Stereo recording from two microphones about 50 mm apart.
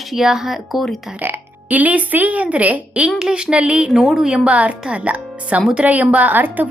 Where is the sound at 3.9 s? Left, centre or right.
Centre.